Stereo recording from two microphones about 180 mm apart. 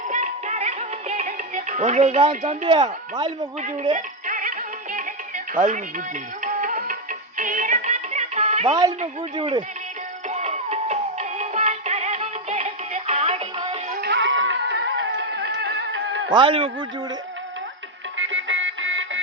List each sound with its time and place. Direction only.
0.1 s music: 40° right (ahead or behind)
2.3 s speech: 45° right (ahead or behind)
2.6 s a man's voice: 25° right (ahead or behind)
3.9 s music: 45° right (ahead or behind)
6.4 s music: 45° right (ahead or behind)
8.7 s a man's voice: 20° right (ahead or behind)
10.2 s music: 40° right (ahead or behind)
14.0 s music: 75° right (ahead or behind)
16.3 s a man's voice: 30° right (ahead or behind)
18.2 s music: 90° right